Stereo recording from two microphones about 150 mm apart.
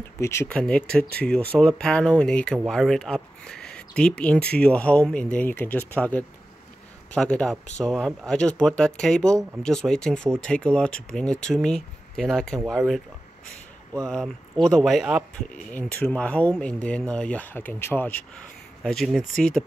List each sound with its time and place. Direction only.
0.2 s speech: 20° left (ahead or behind)
0.5 s speech: 5° left (ahead or behind)
14.0 s speech: 5° left (ahead or behind)
15.5 s speech: 10° left (ahead or behind)